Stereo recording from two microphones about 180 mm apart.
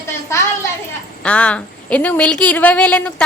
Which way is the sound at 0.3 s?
15° left (ahead or behind).